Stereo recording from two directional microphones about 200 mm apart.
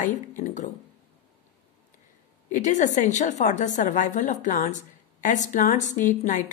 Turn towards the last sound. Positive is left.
turn(degrees=40)  # may be behind; listen again after turning